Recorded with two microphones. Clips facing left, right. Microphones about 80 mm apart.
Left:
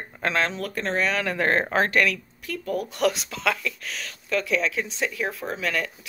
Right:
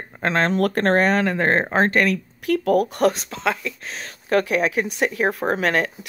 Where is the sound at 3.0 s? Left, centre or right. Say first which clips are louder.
Right 4 dB; right.